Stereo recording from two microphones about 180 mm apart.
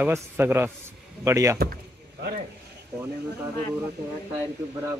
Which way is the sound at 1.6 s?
60° right (ahead or behind).